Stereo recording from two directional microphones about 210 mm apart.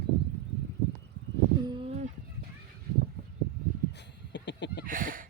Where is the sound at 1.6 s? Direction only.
25° right (ahead or behind).